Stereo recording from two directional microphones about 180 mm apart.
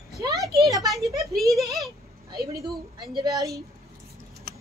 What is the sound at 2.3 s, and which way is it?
Speech, 60° right (ahead or behind).